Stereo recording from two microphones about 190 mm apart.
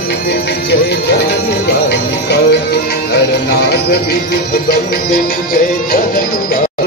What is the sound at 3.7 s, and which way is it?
Speech, 55° left (ahead or behind).